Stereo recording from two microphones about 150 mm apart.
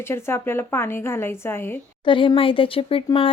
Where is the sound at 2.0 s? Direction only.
35° left (ahead or behind).